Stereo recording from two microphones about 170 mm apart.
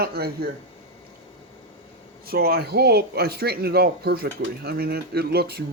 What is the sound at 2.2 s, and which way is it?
Speech, 65° right (ahead or behind).